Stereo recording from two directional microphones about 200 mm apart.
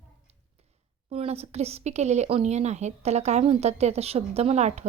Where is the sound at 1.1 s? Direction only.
30° right (ahead or behind).